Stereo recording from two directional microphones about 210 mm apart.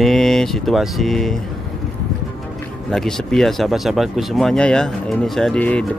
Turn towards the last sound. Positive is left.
turn(degrees=5)  # may be behind; listen again after turning